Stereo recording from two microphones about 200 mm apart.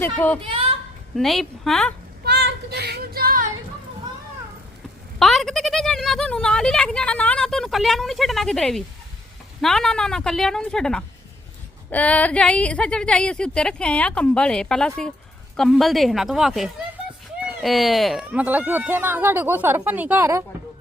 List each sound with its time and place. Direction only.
0.0 s a woman's voice: 10° left (ahead or behind)
2.2 s child singing: 55° right (ahead or behind)
5.2 s speech: centre (ahead or behind)